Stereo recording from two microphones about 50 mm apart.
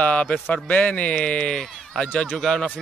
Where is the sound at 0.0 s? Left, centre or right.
Left.